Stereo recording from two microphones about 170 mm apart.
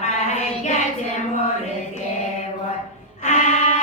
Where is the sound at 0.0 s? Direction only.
45° left (ahead or behind).